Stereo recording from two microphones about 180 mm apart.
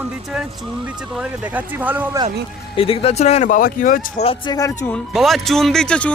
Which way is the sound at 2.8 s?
30° left (ahead or behind).